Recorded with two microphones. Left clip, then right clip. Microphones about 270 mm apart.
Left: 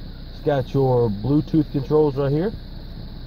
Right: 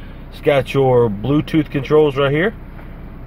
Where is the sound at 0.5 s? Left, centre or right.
Centre.